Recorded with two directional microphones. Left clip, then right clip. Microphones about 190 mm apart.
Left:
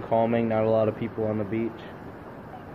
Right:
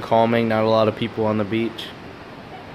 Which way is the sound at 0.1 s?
40° right (ahead or behind).